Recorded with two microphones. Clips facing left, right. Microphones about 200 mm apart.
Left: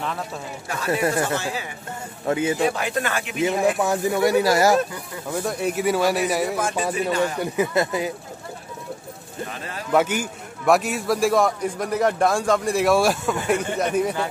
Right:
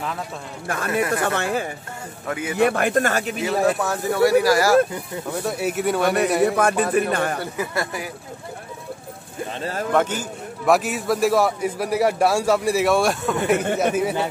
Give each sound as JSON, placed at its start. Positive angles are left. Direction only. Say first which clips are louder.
{"t": 0.7, "sound": "speech", "louder": "even", "side_deg": -55}
{"t": 2.2, "sound": "speech", "louder": "left 6 dB", "side_deg": 25}
{"t": 2.5, "sound": "speech", "louder": "right 4 dB", "side_deg": -60}
{"t": 3.6, "sound": "speech", "louder": "even", "side_deg": 15}
{"t": 5.4, "sound": "a man's voice", "louder": "even", "side_deg": -5}
{"t": 6.4, "sound": "speech", "louder": "right 5 dB", "side_deg": -60}
{"t": 7.3, "sound": "speech", "louder": "left 4 dB", "side_deg": 20}
{"t": 9.5, "sound": "speech", "louder": "right 5 dB", "side_deg": -30}
{"t": 9.9, "sound": "speech", "louder": "left 2 dB", "side_deg": 10}
{"t": 10.6, "sound": "a man's voice", "louder": "even", "side_deg": 0}